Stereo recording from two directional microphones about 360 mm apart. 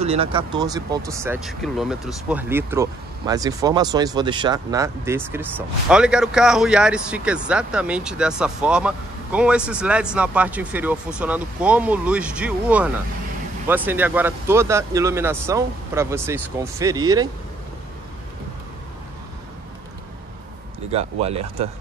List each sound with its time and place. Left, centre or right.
0.0 s speech: centre
20.9 s speech: centre